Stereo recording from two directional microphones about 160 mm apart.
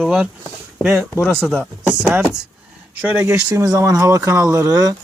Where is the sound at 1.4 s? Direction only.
Centre (ahead or behind).